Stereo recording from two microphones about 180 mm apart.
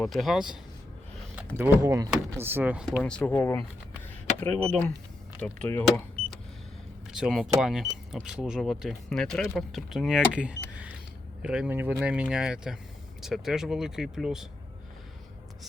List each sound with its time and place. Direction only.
0.0 s speech: centre (ahead or behind)
3.0 s speech: 5° left (ahead or behind)
7.1 s speech: centre (ahead or behind)